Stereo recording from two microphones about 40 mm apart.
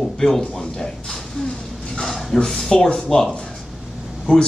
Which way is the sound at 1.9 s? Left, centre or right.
Centre.